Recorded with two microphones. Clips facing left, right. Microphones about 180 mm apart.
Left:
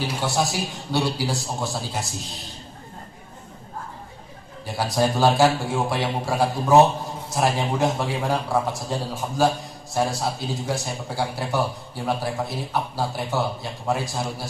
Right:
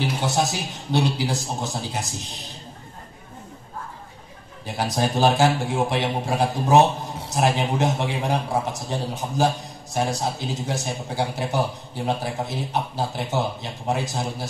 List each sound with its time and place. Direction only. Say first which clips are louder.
0.3 s speech: even; 20° right (ahead or behind)
4.6 s speech: left 2 dB; 20° right (ahead or behind)